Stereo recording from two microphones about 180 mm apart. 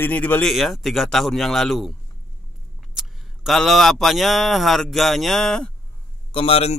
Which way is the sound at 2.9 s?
Centre (ahead or behind).